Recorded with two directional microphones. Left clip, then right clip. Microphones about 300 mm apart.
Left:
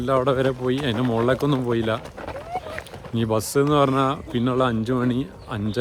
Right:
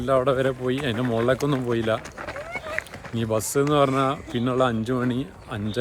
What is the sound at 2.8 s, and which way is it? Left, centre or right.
Speech, centre.